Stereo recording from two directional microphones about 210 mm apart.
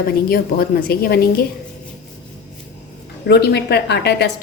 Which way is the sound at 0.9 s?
45° left (ahead or behind).